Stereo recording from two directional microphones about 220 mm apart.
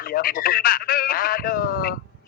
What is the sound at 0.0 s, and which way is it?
Speech, 40° left (ahead or behind).